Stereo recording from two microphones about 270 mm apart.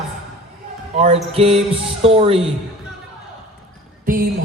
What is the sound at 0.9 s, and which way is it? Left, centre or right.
Music, right.